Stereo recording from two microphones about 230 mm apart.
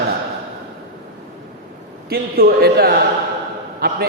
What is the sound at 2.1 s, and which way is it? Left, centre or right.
A man's voice, right.